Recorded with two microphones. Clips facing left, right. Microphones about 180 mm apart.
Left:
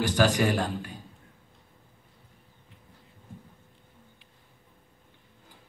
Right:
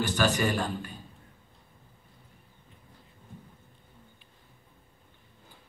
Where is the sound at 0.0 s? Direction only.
90° left.